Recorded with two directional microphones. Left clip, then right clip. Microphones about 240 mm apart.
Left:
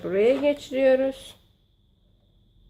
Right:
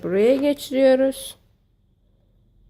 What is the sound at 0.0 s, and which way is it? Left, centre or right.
Speech, right.